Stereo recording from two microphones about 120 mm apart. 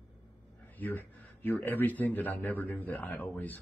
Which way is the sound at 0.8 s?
15° left (ahead or behind).